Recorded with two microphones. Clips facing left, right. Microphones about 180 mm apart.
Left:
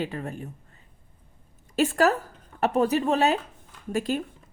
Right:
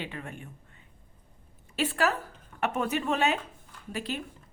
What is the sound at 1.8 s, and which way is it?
A woman's voice, 45° left (ahead or behind).